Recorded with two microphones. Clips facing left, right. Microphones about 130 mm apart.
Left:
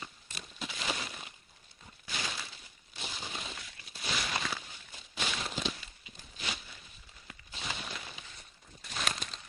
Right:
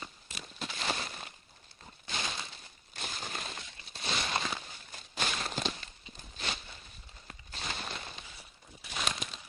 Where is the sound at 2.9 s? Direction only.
50° right (ahead or behind).